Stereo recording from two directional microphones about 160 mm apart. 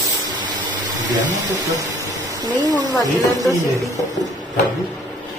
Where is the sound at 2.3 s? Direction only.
25° right (ahead or behind).